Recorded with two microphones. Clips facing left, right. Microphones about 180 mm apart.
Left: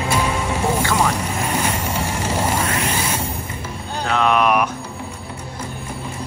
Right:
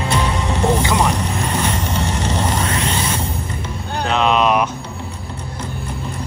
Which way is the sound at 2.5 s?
25° right (ahead or behind).